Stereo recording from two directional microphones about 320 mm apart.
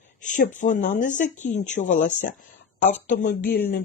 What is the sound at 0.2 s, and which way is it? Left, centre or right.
Speech, left.